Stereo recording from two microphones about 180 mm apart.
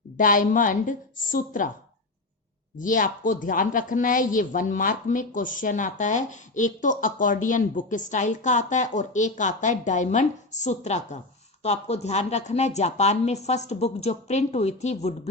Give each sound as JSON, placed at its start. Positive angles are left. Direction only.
{"t": 0.2, "sound": "a woman's voice", "side_deg": 50}
{"t": 2.7, "sound": "a woman's voice", "side_deg": 45}